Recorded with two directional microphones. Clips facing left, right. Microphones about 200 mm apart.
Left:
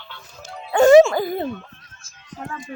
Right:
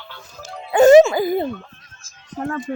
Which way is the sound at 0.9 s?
5° right (ahead or behind).